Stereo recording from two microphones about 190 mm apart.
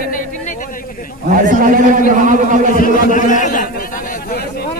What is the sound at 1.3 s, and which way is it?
A man's voice, 45° right (ahead or behind).